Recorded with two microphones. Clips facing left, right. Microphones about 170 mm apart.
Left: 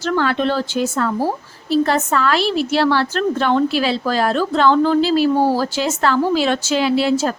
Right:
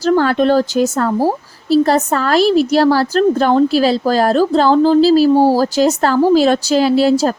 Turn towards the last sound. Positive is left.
turn(degrees=-40)  # may be behind; listen again after turning